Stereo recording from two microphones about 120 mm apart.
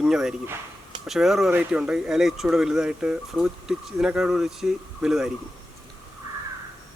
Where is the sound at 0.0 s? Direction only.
5° right (ahead or behind).